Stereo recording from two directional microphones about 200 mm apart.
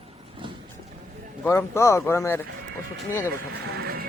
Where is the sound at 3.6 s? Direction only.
50° right (ahead or behind).